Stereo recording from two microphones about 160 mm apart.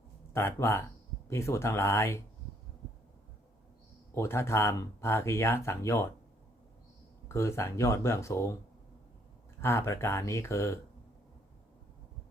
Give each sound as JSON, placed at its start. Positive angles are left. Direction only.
{"t": 0.3, "sound": "speech", "side_deg": 15}
{"t": 4.1, "sound": "speech", "side_deg": 15}
{"t": 7.3, "sound": "speech", "side_deg": 15}
{"t": 9.6, "sound": "speech", "side_deg": 15}